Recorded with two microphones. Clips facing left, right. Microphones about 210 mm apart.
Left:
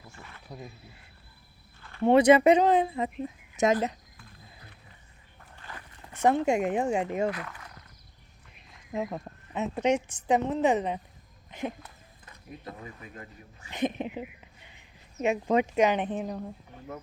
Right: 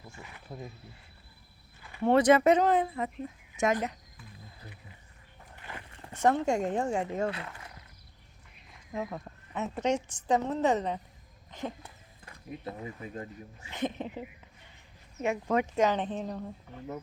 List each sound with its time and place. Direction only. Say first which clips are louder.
0.2 s cricket: even; 10° right (ahead or behind)
1.8 s a sound: left 3 dB; 10° right (ahead or behind)
2.0 s speech: left 3 dB; 10° left (ahead or behind)
5.5 s a sound: right 1 dB; 20° right (ahead or behind)
6.2 s speech: left 2 dB; 15° left (ahead or behind)
7.3 s speech: left 3 dB; 25° right (ahead or behind)
9.0 s speech: left 3 dB; 20° left (ahead or behind)
11.8 s speech: left 1 dB; 30° right (ahead or behind)
13.7 s speech: left 4 dB; 15° left (ahead or behind)